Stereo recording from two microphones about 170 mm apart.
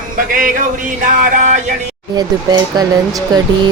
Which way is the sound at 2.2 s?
25° right (ahead or behind).